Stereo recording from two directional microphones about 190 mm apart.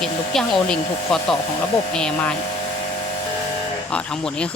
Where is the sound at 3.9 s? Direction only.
5° left (ahead or behind).